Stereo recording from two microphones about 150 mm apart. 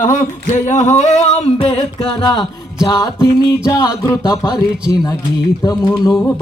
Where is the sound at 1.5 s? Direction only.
40° left (ahead or behind).